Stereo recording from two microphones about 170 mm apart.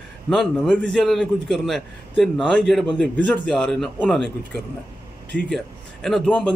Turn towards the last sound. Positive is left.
turn(degrees=5)  # may be behind; listen again after turning